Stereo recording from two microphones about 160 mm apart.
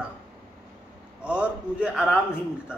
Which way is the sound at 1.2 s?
5° right (ahead or behind).